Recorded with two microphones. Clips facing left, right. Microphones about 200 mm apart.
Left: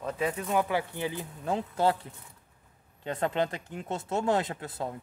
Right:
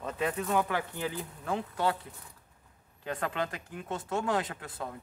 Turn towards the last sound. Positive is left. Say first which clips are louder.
# left 4 dB
turn(degrees=25)  # may be behind; listen again after turning